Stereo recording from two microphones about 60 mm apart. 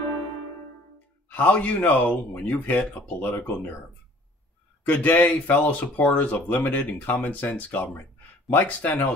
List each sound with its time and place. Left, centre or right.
1.3 s speech: left
4.8 s speech: left